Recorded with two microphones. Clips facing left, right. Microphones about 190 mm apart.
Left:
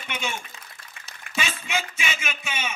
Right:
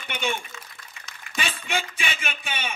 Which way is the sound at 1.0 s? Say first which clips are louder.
Right 3 dB; 55° left (ahead or behind).